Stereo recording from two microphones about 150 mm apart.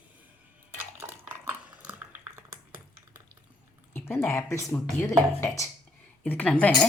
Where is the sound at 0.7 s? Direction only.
15° right (ahead or behind).